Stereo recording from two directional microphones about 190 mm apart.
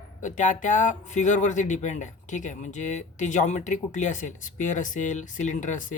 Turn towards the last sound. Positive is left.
turn(degrees=40)  # may be behind; listen again after turning